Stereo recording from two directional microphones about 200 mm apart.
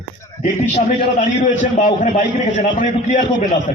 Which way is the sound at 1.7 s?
35° left (ahead or behind).